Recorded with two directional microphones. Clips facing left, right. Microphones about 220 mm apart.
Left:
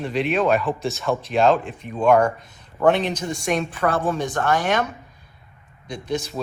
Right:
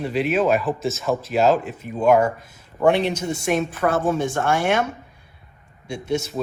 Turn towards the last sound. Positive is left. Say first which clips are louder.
# right 2 dB
turn(degrees=-10)  # may be behind; listen again after turning